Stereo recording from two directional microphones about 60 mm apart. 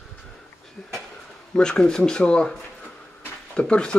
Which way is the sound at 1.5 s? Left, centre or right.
Centre.